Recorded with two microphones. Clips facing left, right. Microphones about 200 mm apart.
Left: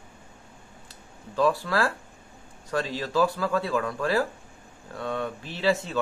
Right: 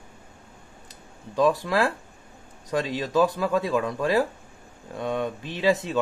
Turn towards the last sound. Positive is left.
turn(degrees=-15)  # may be behind; listen again after turning